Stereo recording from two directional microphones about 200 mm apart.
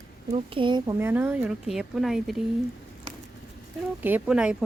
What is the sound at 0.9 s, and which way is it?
Speech, 10° right (ahead or behind).